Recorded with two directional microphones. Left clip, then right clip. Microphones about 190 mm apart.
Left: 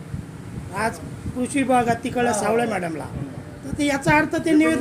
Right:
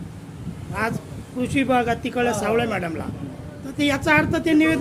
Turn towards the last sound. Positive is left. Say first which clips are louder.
# even
turn(degrees=0)  # may be behind; listen again after turning